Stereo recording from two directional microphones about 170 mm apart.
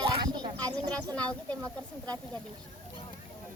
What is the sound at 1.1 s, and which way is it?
Speech, 5° left (ahead or behind).